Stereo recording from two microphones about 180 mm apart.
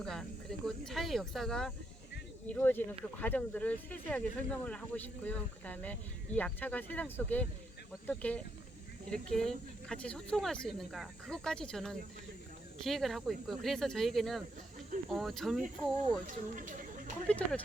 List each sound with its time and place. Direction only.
0.0 s speech: centre (ahead or behind)
16.2 s speech: 45° right (ahead or behind)
17.2 s speech: 5° left (ahead or behind)